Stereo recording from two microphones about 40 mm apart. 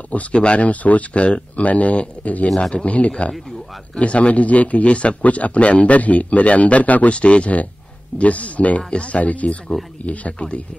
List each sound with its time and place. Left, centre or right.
0.3 s a man's voice: left
2.4 s speech: centre
2.7 s a man's voice: left